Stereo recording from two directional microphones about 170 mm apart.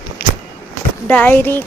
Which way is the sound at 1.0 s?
10° left (ahead or behind).